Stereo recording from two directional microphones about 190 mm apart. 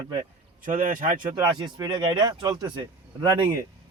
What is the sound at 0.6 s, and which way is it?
Speech, 45° right (ahead or behind).